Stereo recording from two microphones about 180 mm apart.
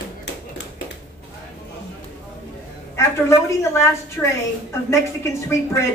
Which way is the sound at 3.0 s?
15° left (ahead or behind).